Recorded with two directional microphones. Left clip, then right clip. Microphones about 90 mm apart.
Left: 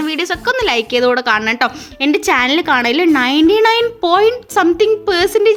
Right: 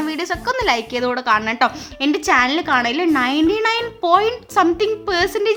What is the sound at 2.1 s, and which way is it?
A child's voice, 45° left (ahead or behind).